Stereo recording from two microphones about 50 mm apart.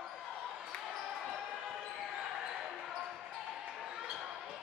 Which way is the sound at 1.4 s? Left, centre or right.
Centre.